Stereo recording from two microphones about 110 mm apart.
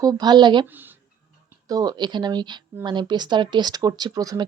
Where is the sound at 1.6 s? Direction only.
35° right (ahead or behind).